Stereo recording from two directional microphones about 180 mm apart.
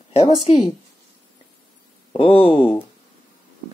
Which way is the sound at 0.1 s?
35° left (ahead or behind).